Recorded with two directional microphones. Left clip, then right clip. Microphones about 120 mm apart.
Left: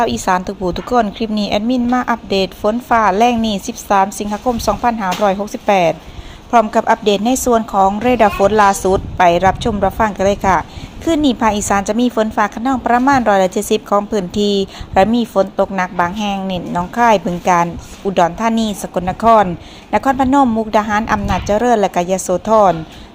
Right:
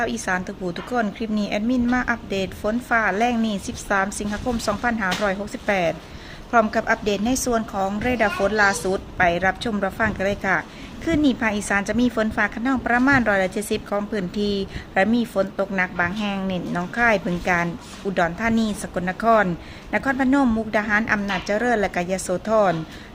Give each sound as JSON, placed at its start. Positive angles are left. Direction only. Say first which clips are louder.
{"t": 0.0, "sound": "a woman's voice", "louder": "left 9 dB", "side_deg": 40}